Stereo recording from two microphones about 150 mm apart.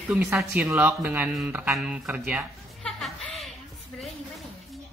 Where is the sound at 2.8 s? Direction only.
Centre (ahead or behind).